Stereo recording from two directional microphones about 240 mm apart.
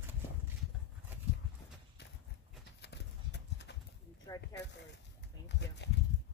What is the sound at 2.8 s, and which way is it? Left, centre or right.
Clip-clop, left.